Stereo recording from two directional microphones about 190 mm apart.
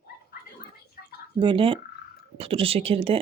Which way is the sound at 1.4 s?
25° right (ahead or behind).